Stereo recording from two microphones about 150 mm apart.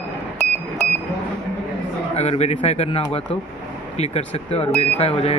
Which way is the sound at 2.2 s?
45° left (ahead or behind).